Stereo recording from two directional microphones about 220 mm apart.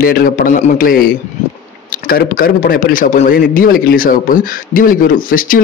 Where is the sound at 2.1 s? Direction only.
40° left (ahead or behind).